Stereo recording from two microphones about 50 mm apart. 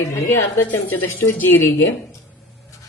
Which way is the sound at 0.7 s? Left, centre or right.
Left.